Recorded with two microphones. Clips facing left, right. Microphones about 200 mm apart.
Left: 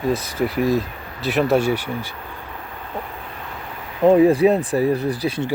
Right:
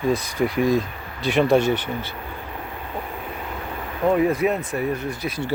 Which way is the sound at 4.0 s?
30° left (ahead or behind).